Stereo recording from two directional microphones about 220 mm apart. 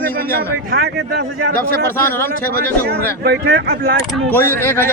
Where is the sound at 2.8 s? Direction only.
45° right (ahead or behind).